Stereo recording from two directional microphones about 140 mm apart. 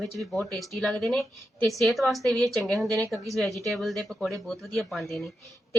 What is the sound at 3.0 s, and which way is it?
Speech, 25° right (ahead or behind).